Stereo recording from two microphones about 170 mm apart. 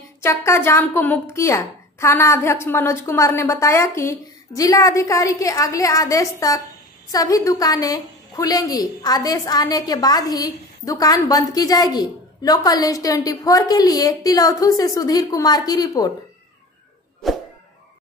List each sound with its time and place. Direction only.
0.2 s a woman's voice: 15° left (ahead or behind)